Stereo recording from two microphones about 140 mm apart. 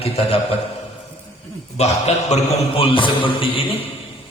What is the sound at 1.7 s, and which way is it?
A man's voice, 50° left (ahead or behind).